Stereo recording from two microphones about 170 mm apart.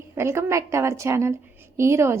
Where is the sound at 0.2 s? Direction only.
15° right (ahead or behind).